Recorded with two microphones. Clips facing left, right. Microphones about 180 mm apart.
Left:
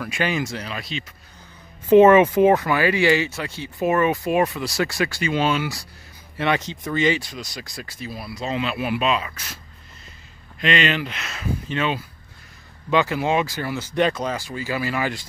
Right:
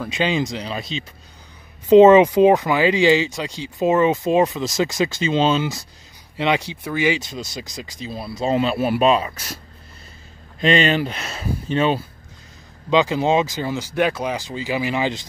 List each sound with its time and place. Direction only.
0.0 s speech: 20° right (ahead or behind)
7.2 s speech: 25° right (ahead or behind)
8.5 s speech: 40° right (ahead or behind)
10.6 s speech: 35° right (ahead or behind)
12.9 s speech: 20° right (ahead or behind)